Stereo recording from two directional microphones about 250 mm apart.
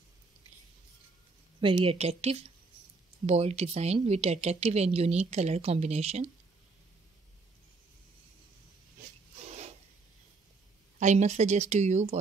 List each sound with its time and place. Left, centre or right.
1.6 s speech: centre
11.0 s speech: right